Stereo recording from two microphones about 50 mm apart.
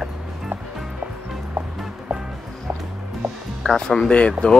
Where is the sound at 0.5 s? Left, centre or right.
Right.